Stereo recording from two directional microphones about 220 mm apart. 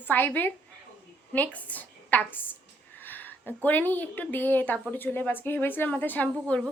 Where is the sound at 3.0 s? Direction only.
10° left (ahead or behind).